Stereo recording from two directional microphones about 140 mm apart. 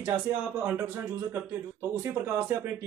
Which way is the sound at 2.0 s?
15° right (ahead or behind).